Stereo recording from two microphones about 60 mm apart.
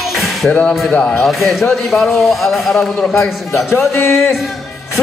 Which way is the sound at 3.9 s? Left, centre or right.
Left.